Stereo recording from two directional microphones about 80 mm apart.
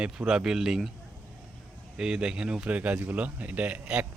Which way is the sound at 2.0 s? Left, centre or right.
Centre.